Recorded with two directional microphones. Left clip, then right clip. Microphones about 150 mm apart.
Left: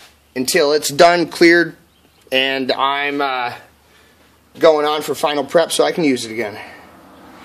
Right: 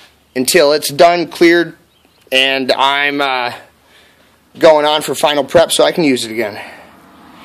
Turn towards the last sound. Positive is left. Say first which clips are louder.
# right 4 dB
turn(degrees=-30)  # may be behind; listen again after turning